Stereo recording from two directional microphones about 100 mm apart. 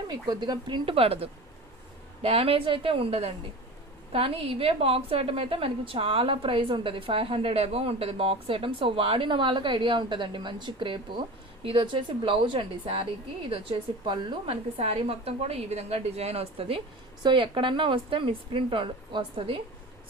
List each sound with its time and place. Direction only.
0.1 s speech: 45° right (ahead or behind)
0.9 s a woman's voice: 75° right (ahead or behind)
4.1 s a woman's voice: 70° right (ahead or behind)
17.2 s a woman's voice: 60° right (ahead or behind)